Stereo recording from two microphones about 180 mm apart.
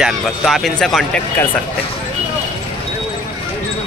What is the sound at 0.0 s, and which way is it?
Speech, centre (ahead or behind).